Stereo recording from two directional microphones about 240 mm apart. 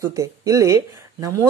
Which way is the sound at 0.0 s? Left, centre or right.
Centre.